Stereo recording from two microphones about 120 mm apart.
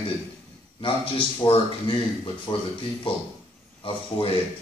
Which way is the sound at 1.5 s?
45° left (ahead or behind).